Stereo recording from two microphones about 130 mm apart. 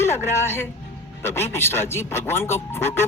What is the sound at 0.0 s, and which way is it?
Speech, 20° left (ahead or behind).